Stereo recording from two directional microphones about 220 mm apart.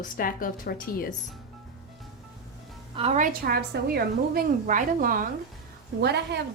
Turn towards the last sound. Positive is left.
turn(degrees=-50)  # may be behind; listen again after turning